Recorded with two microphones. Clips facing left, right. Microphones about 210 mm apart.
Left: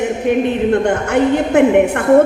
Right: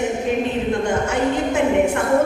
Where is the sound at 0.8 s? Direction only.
60° left (ahead or behind).